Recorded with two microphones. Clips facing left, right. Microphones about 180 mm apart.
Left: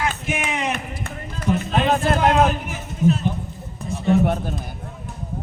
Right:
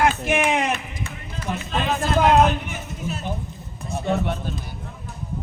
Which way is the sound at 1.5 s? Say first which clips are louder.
Left 5 dB; 55° left (ahead or behind).